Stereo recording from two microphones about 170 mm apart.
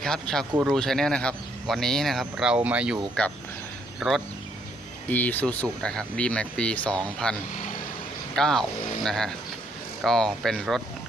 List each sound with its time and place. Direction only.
0.0 s speech: 5° left (ahead or behind)
4.0 s speech: 5° right (ahead or behind)
5.0 s speech: 10° left (ahead or behind)
8.4 s speech: 5° left (ahead or behind)